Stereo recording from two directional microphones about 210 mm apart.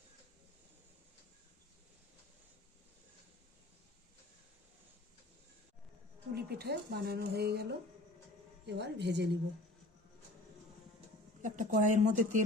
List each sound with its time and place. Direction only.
6.3 s a woman's voice: 50° right (ahead or behind)
11.4 s speech: 40° right (ahead or behind)